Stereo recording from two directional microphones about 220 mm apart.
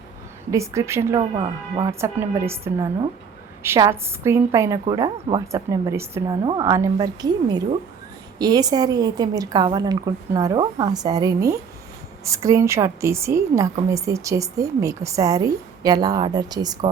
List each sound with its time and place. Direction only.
0.5 s a woman's voice: 15° right (ahead or behind)
1.2 s speech: 25° right (ahead or behind)
1.9 s a woman's voice: 10° right (ahead or behind)